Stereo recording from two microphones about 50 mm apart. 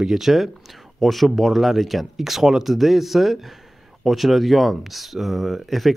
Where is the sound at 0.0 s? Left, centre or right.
Centre.